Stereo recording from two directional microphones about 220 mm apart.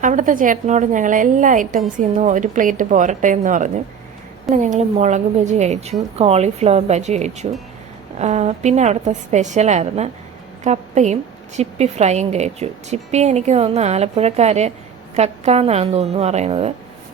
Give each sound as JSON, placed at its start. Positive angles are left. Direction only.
{"t": 0.0, "sound": "a woman's voice", "side_deg": -35}